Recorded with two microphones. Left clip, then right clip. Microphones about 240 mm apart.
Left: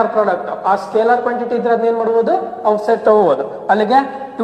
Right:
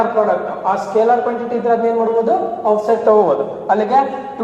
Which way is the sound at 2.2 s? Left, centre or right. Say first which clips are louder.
Even; left.